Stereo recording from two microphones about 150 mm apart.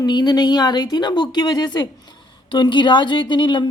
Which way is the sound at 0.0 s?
25° left (ahead or behind).